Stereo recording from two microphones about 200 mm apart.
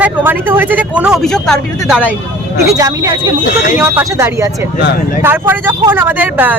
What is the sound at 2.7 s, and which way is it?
Speech, 15° right (ahead or behind).